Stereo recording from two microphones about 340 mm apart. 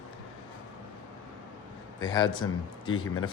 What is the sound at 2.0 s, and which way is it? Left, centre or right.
Speech, centre.